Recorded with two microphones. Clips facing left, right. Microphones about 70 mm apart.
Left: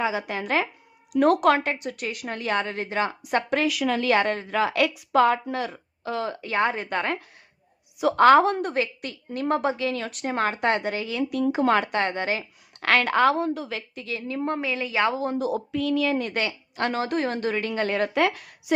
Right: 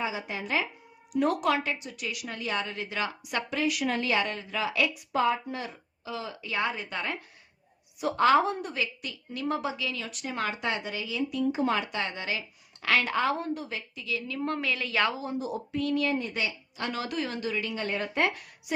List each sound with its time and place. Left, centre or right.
0.0 s a woman's voice: left
3.5 s speech: left
4.2 s speech: left
8.7 s a woman's voice: left
12.8 s speech: left
13.9 s a woman's voice: left
14.4 s a woman's voice: left
15.1 s a woman's voice: left
15.4 s a woman's voice: left
16.9 s a woman's voice: left
17.8 s a woman's voice: left